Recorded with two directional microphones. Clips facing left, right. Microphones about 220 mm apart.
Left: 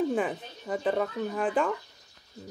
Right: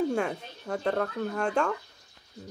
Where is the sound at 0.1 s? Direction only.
5° left (ahead or behind).